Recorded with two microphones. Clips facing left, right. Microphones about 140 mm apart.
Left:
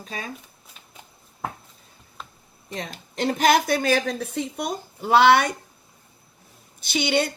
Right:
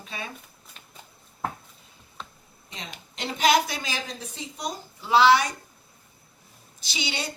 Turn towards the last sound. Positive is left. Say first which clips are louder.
# left 10 dB
turn(degrees=55)  # may be behind; listen again after turning